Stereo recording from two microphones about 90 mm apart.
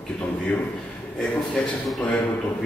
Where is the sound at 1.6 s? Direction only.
10° left (ahead or behind).